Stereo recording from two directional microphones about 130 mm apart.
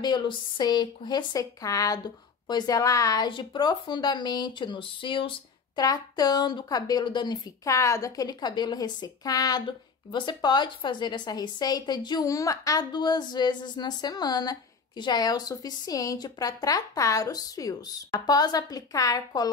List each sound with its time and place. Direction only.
0.0 s a woman's voice: 35° left (ahead or behind)
7.6 s a woman's voice: 25° left (ahead or behind)